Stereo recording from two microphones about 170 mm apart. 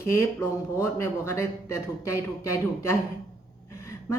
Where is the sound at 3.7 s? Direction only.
15° left (ahead or behind).